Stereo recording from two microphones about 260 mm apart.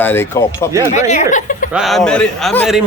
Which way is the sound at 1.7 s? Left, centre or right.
Centre.